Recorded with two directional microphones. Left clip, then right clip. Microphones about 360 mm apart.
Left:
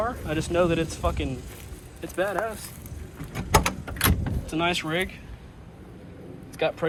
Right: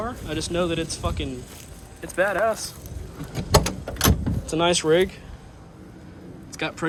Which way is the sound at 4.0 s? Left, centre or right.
Centre.